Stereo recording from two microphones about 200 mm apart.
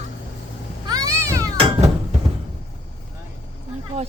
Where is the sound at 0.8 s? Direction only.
20° right (ahead or behind).